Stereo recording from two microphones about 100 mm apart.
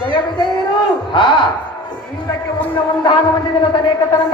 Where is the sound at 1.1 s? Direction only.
55° left (ahead or behind).